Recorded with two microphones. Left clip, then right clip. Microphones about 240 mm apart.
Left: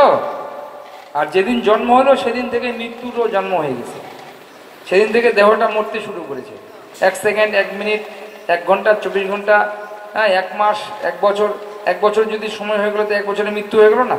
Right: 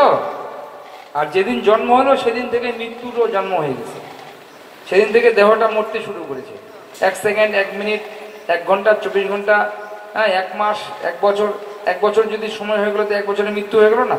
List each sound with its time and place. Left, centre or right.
1.1 s a man's voice: left
4.8 s a man's voice: left